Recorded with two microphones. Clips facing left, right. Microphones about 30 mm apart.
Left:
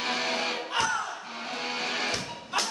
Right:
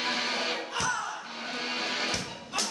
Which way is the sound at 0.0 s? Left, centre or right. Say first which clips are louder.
Left 1 dB; centre.